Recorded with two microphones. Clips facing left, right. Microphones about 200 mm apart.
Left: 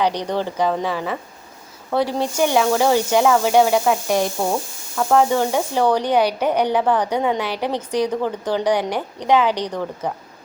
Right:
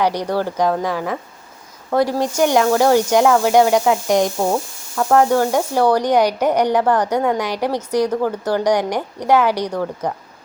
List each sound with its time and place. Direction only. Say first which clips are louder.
0.0 s a woman's voice: right 2 dB; 10° right (ahead or behind)
4.9 s a woman's voice: right 2 dB; 5° right (ahead or behind)